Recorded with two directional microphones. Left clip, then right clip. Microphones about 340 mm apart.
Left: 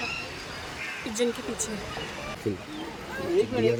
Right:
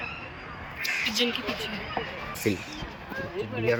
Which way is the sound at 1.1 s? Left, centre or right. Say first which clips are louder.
Right 1 dB; centre.